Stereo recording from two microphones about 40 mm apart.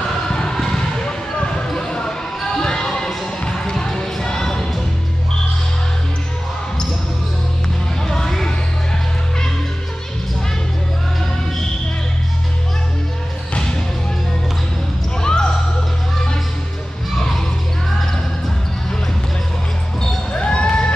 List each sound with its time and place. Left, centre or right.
0.3 s basketball bounce: centre
2.5 s a sound: centre
8.1 s music: centre
15.2 s basketball bounce: centre
20.3 s basketball bounce: left